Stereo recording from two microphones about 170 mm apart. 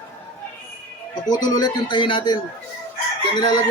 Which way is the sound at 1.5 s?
25° left (ahead or behind).